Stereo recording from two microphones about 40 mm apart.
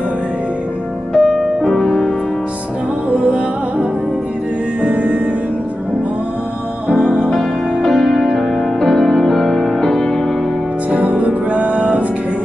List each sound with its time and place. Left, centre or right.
1.1 s music: centre
1.7 s music: left
3.2 s music: right
4.8 s music: right
7.3 s music: centre
10.9 s music: right